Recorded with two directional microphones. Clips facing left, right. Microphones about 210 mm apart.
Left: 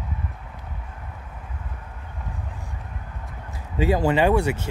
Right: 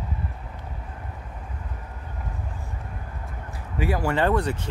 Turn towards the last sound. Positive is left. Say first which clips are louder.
# left 3 dB
turn(degrees=10)  # may be behind; listen again after turning